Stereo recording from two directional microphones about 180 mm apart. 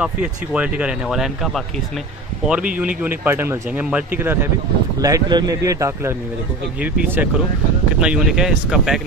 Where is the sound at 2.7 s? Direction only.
10° right (ahead or behind).